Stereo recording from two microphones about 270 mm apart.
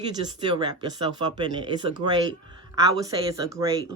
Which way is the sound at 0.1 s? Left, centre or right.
Centre.